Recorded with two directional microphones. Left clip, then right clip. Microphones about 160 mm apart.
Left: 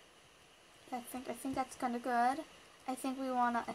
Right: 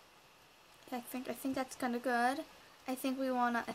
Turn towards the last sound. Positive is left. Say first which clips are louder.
# even
turn(degrees=-25)  # may be behind; listen again after turning